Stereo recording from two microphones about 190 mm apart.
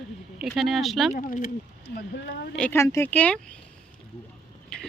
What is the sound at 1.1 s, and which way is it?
Speech, 45° left (ahead or behind).